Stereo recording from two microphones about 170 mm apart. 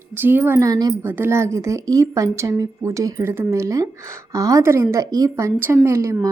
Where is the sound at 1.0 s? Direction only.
10° right (ahead or behind).